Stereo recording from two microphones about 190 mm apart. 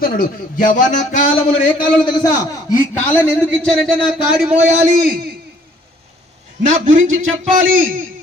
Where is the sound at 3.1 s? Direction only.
5° left (ahead or behind).